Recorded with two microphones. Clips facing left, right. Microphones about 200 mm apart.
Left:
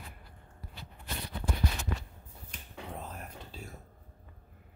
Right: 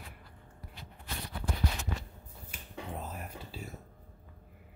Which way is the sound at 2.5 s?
5° right (ahead or behind).